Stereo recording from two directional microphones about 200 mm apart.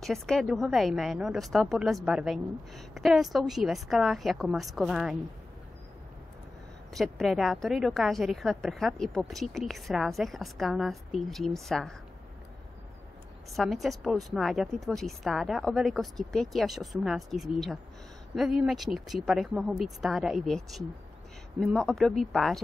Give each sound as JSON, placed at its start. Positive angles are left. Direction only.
{"t": 0.0, "sound": "a woman's voice", "side_deg": 0}
{"t": 6.9, "sound": "a woman's voice", "side_deg": 0}
{"t": 13.5, "sound": "a woman's voice", "side_deg": 0}